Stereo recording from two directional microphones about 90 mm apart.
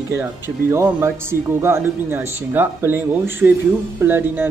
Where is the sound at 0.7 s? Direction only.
30° right (ahead or behind).